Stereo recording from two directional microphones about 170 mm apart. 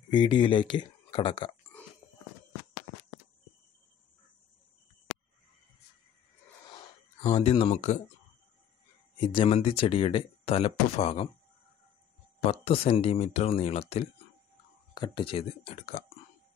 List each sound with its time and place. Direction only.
0.1 s speech: 25° left (ahead or behind)
7.2 s speech: 30° left (ahead or behind)
9.2 s speech: 30° left (ahead or behind)
12.4 s speech: 35° left (ahead or behind)